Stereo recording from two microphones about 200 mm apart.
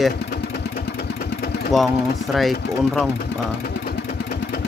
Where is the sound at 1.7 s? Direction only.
Centre (ahead or behind).